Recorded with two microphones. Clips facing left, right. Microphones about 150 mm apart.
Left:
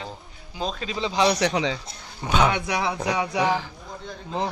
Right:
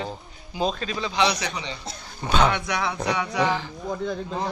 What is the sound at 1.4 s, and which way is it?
Speech, 90° left.